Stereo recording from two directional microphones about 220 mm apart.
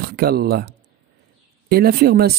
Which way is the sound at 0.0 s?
45° right (ahead or behind).